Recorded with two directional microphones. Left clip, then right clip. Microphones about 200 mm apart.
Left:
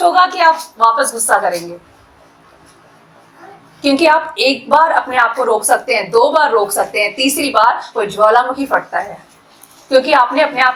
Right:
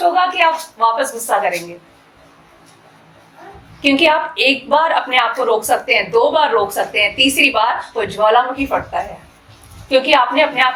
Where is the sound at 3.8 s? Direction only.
25° left (ahead or behind).